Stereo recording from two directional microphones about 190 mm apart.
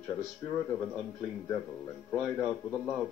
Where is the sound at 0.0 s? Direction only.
15° left (ahead or behind).